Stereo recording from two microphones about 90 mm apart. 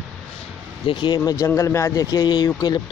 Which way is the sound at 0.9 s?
65° left (ahead or behind).